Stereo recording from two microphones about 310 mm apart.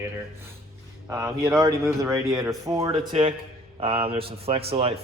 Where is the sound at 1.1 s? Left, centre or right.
Centre.